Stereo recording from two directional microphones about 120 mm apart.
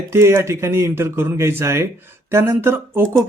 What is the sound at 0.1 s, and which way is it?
Speech, 20° right (ahead or behind).